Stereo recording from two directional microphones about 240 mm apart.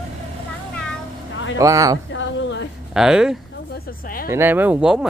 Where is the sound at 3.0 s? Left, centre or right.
Centre.